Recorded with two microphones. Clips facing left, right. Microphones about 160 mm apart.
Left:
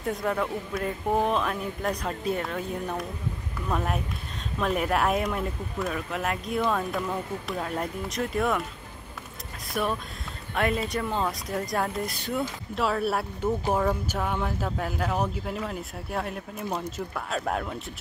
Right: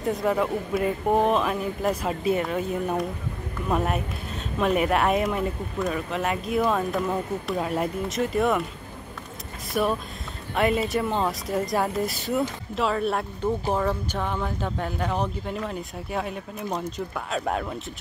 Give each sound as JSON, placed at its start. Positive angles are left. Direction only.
{"t": 0.0, "sound": "speech", "side_deg": 0}
{"t": 9.8, "sound": "speech", "side_deg": 0}